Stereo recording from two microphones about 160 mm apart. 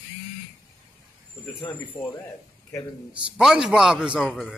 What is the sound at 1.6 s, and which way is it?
Speech, 15° left (ahead or behind).